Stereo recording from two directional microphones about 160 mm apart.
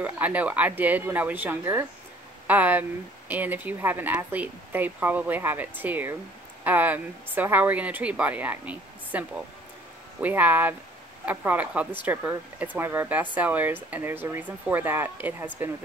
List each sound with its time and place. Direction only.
0.0 s speech: 10° right (ahead or behind)